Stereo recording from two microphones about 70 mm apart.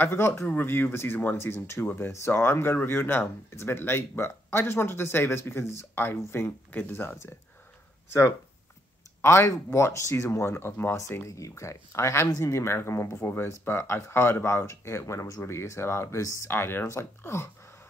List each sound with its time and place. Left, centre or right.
0.0 s speech: left
9.2 s speech: left
11.0 s speech: left
15.4 s speech: left
16.4 s speech: left